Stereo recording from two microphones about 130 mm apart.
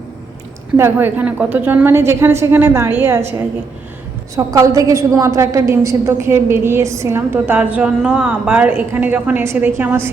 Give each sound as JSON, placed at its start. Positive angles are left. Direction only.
{"t": 0.8, "sound": "a woman's voice", "side_deg": -15}
{"t": 4.4, "sound": "a woman's voice", "side_deg": -25}